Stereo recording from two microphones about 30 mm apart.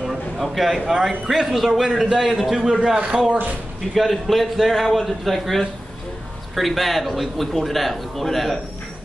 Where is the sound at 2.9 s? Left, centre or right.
Right.